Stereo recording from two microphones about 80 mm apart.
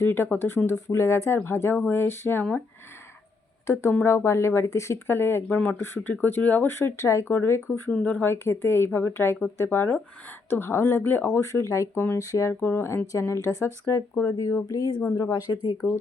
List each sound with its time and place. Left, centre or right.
0.0 s speech: left
3.7 s speech: left
5.1 s speech: left
6.7 s speech: left
7.9 s speech: centre
8.3 s speech: left
11.3 s speech: left
12.5 s speech: left